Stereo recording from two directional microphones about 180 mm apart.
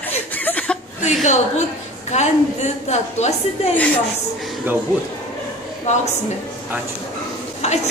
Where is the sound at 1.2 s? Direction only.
40° left (ahead or behind).